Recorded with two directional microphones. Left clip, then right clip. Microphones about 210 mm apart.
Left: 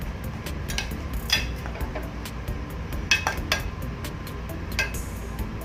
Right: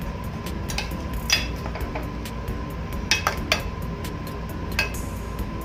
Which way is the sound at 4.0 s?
Centre (ahead or behind).